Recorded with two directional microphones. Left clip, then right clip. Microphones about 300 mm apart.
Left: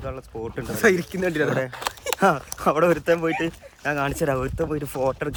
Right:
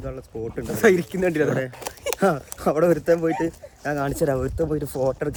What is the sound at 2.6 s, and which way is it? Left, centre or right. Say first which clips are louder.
Speech: even; centre.